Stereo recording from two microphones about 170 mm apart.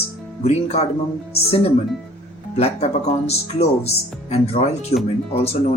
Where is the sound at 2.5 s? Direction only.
40° left (ahead or behind).